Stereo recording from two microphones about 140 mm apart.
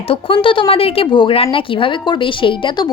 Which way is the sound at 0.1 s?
40° left (ahead or behind).